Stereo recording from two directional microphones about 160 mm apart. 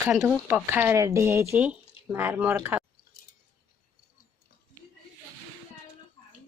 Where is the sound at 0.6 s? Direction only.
15° right (ahead or behind).